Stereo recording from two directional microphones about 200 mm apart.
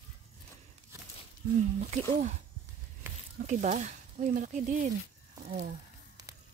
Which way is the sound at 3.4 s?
40° right (ahead or behind).